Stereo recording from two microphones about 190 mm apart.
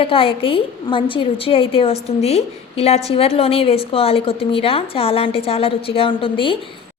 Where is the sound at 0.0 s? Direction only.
30° left (ahead or behind).